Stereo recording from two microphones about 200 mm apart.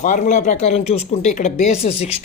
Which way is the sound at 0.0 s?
40° left (ahead or behind).